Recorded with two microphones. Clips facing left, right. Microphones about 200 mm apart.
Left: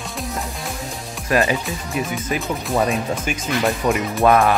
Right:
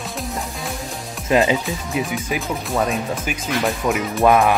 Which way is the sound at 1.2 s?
20° right (ahead or behind).